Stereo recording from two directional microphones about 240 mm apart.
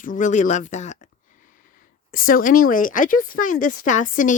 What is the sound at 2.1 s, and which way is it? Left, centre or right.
Speech, left.